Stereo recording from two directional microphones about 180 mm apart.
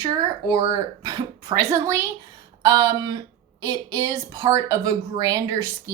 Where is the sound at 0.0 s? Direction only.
20° right (ahead or behind).